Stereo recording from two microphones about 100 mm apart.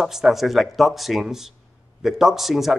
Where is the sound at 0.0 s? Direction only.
5° right (ahead or behind).